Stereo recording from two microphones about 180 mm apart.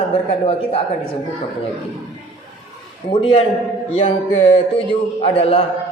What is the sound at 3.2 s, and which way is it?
A man's voice, 30° left (ahead or behind).